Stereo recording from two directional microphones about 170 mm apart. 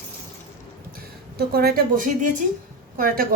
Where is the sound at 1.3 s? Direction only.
65° right (ahead or behind).